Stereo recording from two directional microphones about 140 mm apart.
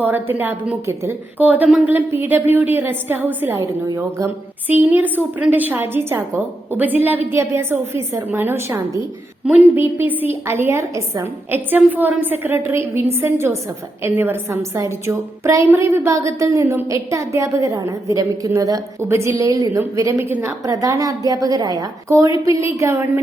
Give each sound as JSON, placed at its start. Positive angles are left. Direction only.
{"t": 0.0, "sound": "a woman's voice", "side_deg": -15}